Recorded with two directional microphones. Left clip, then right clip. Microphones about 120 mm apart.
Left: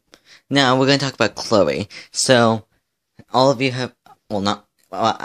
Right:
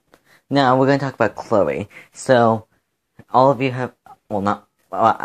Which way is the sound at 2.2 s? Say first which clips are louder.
Even; 35° left (ahead or behind).